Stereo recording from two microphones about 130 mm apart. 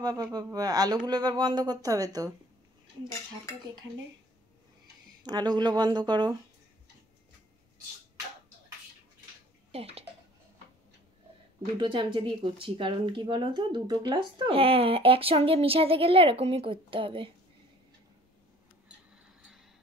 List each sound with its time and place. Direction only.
0.0 s speech: 30° right (ahead or behind)
5.2 s speech: 35° right (ahead or behind)
9.7 s speech: 50° right (ahead or behind)
11.8 s speech: 40° right (ahead or behind)